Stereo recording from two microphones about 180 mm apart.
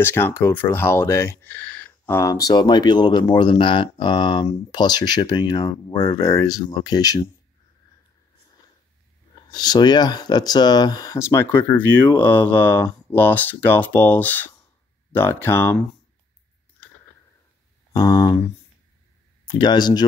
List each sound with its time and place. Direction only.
0.0 s speech: 15° left (ahead or behind)
9.5 s speech: 20° left (ahead or behind)
17.9 s speech: 25° left (ahead or behind)
19.4 s speech: 25° left (ahead or behind)